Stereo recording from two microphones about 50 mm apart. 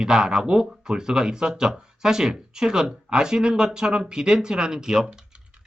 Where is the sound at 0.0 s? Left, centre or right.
Centre.